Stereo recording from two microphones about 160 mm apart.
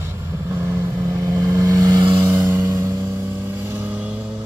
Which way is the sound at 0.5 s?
15° right (ahead or behind).